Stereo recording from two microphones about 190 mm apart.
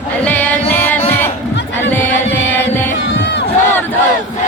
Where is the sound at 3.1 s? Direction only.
65° left (ahead or behind).